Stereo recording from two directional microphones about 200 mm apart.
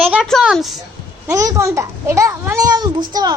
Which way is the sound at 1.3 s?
15° right (ahead or behind).